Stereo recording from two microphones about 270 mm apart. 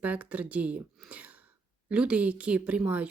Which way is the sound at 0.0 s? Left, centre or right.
Centre.